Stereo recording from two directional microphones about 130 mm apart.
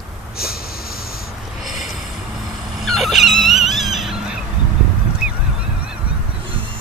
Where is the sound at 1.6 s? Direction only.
Centre (ahead or behind).